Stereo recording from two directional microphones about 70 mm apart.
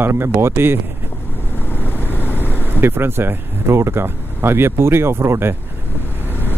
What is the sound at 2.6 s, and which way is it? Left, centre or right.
Speech, right.